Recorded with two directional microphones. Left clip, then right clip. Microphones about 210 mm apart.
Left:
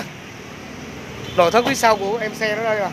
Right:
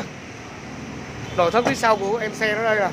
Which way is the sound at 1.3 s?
25° left (ahead or behind).